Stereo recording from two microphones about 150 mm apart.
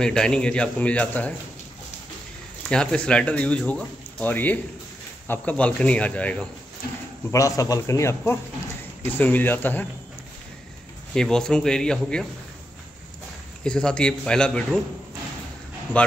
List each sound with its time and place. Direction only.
0.0 s speech: 5° left (ahead or behind)
2.7 s speech: 5° left (ahead or behind)
7.2 s speech: 20° left (ahead or behind)
11.1 s speech: 5° left (ahead or behind)
13.7 s speech: 5° left (ahead or behind)